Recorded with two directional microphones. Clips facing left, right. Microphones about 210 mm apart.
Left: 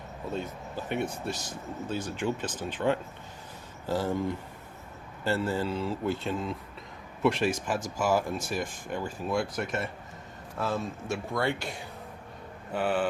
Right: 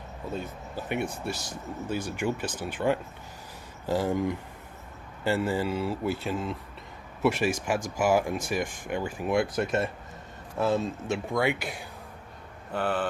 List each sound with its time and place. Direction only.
0.3 s speech: 10° right (ahead or behind)
12.7 s speech: 5° left (ahead or behind)